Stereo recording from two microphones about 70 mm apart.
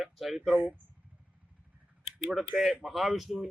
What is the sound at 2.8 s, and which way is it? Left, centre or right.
Speech, centre.